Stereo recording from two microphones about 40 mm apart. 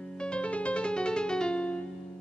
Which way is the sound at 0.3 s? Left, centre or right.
Left.